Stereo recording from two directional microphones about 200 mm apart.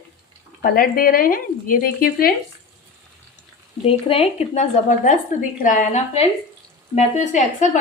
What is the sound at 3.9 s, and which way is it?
A woman's voice, 30° left (ahead or behind).